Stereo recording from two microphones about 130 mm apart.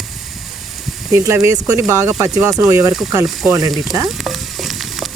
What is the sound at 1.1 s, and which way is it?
Speech, 25° right (ahead or behind).